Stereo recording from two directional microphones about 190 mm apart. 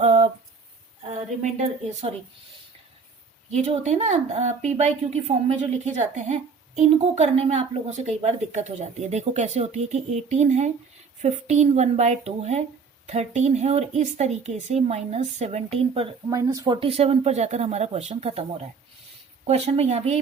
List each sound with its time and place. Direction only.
0.0 s a sound: 35° right (ahead or behind)
1.4 s a woman's voice: 35° right (ahead or behind)
3.5 s a woman's voice: 35° right (ahead or behind)
16.3 s a woman's voice: 20° right (ahead or behind); by 18.4 s 35° right (ahead or behind)
19.5 s a woman's voice: 35° right (ahead or behind)